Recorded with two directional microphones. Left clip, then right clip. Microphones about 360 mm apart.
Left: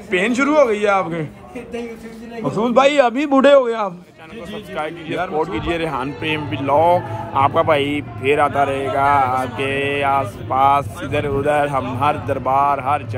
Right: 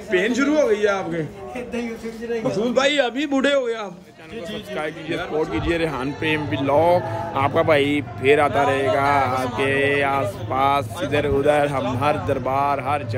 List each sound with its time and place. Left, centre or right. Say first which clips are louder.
0.1 s a man's voice: left 3 dB; centre
2.5 s a man's voice: left 6 dB; centre
4.7 s speech: left 4 dB; centre